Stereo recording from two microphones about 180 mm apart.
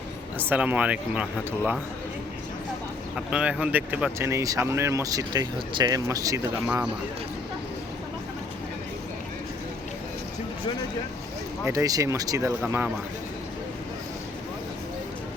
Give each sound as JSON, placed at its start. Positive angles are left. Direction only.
{"t": 0.3, "sound": "speech", "side_deg": -10}
{"t": 3.2, "sound": "speech", "side_deg": -5}
{"t": 11.6, "sound": "speech", "side_deg": -20}